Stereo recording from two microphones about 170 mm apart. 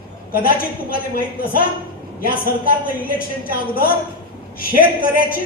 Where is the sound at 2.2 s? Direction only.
60° left (ahead or behind).